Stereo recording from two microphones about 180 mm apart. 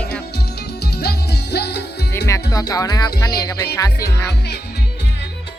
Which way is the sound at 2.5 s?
20° left (ahead or behind).